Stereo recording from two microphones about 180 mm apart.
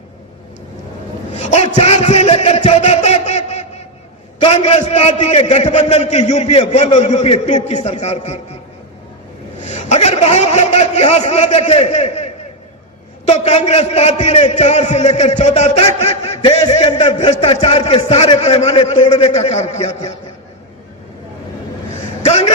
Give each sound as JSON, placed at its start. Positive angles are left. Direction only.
{"t": 1.3, "sound": "a sound", "side_deg": 35}
{"t": 4.4, "sound": "a man's voice", "side_deg": 35}
{"t": 9.6, "sound": "a man's voice", "side_deg": 40}
{"t": 22.2, "sound": "a man's voice", "side_deg": 35}